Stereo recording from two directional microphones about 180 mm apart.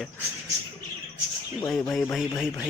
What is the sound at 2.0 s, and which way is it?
Speech, 5° left (ahead or behind).